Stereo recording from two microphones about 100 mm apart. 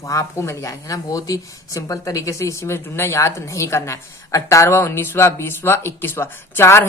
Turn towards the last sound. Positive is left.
turn(degrees=25)  # may be behind; listen again after turning